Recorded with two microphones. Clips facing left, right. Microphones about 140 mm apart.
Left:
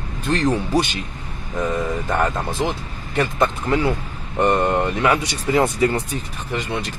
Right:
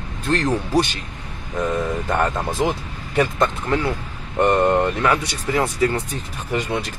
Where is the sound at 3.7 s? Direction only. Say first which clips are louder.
Left 2 dB; 15° left (ahead or behind).